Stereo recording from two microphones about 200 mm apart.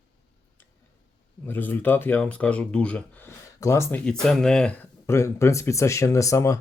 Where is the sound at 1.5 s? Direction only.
10° left (ahead or behind).